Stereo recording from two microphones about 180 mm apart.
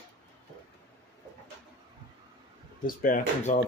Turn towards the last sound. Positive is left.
turn(degrees=45)  # may be behind; listen again after turning